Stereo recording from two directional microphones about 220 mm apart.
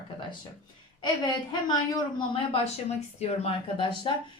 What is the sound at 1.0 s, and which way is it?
A woman's voice, 20° left (ahead or behind).